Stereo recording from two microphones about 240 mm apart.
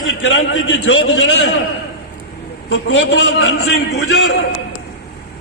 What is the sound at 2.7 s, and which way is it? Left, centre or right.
A man's voice, left.